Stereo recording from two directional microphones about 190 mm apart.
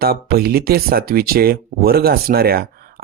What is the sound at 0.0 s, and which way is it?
Speech, 55° right (ahead or behind).